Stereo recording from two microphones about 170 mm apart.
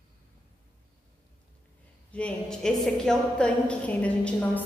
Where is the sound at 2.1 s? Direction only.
5° left (ahead or behind).